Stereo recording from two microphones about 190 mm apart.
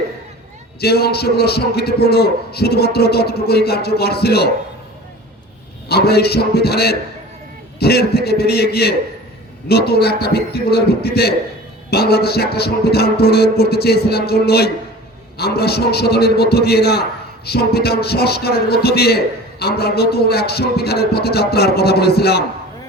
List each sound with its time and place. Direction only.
0.8 s a man's voice: 55° left (ahead or behind)
5.9 s a man's voice: 55° left (ahead or behind)